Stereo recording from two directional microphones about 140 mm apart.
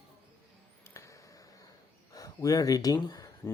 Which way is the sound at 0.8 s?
20° left (ahead or behind).